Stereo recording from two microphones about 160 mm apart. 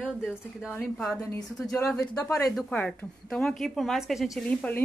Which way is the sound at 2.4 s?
Centre (ahead or behind).